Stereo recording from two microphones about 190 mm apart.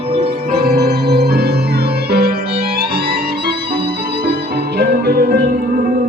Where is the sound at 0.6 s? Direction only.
55° right (ahead or behind).